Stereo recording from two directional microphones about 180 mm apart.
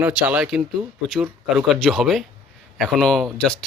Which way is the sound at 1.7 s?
Centre (ahead or behind).